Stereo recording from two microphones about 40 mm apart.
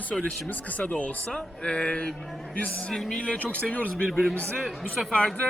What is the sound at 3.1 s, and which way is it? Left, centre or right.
Speech, left.